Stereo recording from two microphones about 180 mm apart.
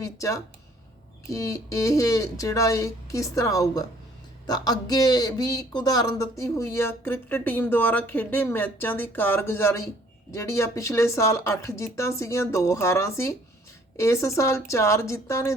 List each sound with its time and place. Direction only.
0.0 s speech: 15° left (ahead or behind)